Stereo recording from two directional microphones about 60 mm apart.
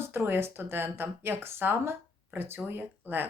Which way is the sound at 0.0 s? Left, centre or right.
Right.